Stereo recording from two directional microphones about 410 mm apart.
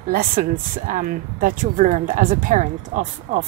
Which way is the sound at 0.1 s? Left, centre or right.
Right.